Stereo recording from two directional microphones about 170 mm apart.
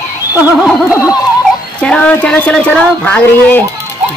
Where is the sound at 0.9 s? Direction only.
20° left (ahead or behind).